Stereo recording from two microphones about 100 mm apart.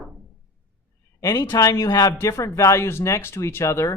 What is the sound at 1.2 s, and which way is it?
Speech, 40° left (ahead or behind).